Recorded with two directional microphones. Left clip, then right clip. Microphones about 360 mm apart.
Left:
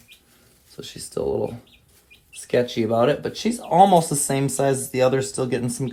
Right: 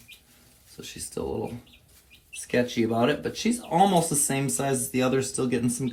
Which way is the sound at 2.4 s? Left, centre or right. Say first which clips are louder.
Left 4 dB; left.